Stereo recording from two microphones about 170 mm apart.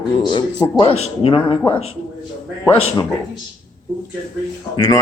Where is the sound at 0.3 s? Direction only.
30° left (ahead or behind).